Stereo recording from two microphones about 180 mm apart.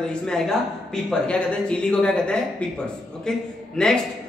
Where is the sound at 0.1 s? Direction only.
Centre (ahead or behind).